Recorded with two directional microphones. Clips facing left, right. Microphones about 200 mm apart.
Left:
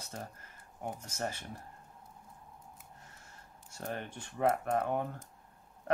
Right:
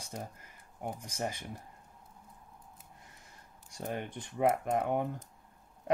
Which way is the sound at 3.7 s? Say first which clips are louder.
Right 2 dB; 15° right (ahead or behind).